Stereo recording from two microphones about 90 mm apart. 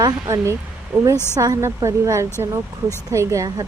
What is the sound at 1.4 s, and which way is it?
Speech, 35° right (ahead or behind).